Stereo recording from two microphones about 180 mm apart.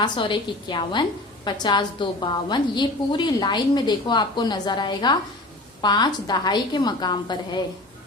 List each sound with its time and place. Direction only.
0.0 s a woman's voice: 25° left (ahead or behind)